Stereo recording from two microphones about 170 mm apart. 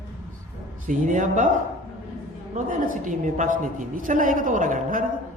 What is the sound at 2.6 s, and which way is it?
A woman's voice, 50° right (ahead or behind).